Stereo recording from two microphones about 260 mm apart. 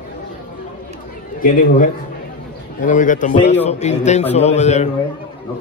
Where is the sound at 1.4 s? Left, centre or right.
Left.